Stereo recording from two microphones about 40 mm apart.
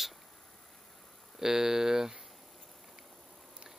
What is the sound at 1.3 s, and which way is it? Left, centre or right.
Speech, centre.